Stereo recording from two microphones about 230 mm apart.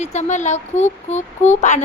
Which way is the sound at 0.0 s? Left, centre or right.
Left.